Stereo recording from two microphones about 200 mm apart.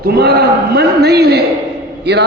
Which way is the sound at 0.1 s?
50° right (ahead or behind).